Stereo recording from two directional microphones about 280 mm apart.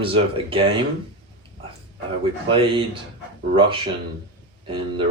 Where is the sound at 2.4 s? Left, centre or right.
Centre.